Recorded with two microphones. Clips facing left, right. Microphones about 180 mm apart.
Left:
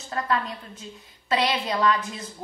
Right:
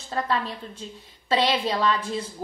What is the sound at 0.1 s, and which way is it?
Speech, 30° right (ahead or behind).